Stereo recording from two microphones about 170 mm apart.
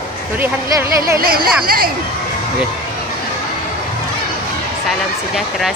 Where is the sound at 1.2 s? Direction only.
60° right (ahead or behind).